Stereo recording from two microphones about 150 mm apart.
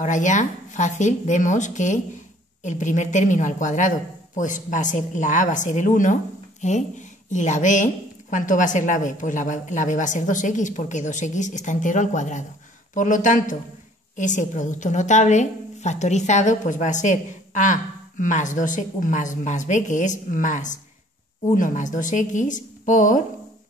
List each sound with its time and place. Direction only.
0.0 s a woman's voice: 55° left (ahead or behind)